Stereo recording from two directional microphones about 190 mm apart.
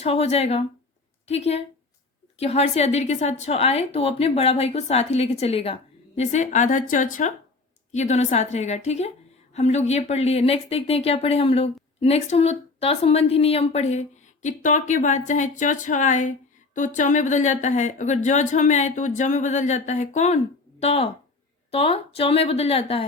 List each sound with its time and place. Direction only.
0.0 s speech: 30° left (ahead or behind)